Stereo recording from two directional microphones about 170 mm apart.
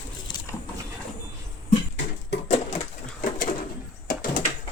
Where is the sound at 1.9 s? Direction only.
90° left.